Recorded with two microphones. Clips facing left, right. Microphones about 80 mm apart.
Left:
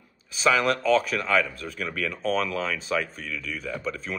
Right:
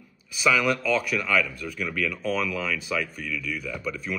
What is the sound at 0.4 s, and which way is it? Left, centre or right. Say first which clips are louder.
A man's voice: left 1 dB; left.